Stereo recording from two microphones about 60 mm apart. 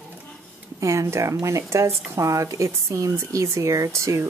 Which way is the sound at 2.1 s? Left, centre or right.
Right.